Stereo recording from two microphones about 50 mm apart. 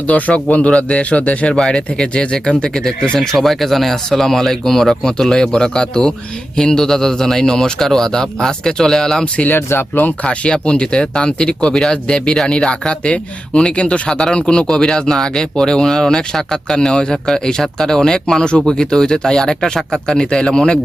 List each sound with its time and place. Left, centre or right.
0.1 s speech: left
1.5 s speech: centre
9.5 s speech: left
9.9 s speech: left
10.2 s speech: left